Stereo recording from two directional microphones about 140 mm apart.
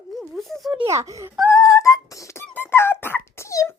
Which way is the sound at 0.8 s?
20° right (ahead or behind).